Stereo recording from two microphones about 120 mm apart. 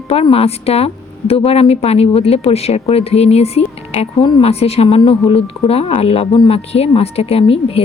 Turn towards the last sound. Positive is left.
turn(degrees=55)  # may be behind; listen again after turning